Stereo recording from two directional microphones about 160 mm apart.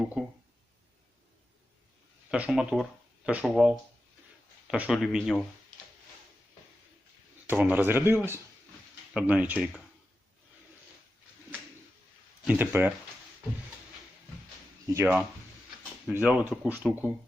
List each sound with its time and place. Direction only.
0.0 s speech: 5° right (ahead or behind)
2.3 s speech: 5° right (ahead or behind)
7.4 s speech: 10° right (ahead or behind)
12.5 s speech: 10° right (ahead or behind)
14.8 s speech: 20° right (ahead or behind)